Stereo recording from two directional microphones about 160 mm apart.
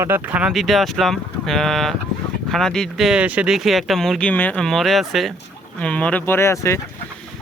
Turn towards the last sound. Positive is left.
turn(degrees=15)  # may be behind; listen again after turning